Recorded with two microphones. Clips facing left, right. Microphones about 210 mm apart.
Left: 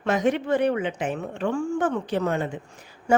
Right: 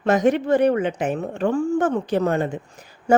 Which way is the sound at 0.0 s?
40° right (ahead or behind).